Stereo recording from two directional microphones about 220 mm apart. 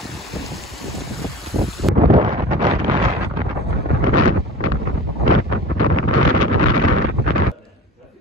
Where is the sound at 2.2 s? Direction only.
30° right (ahead or behind).